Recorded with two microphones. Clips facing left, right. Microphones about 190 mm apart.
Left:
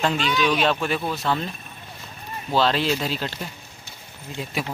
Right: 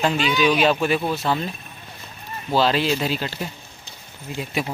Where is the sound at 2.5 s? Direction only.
5° right (ahead or behind).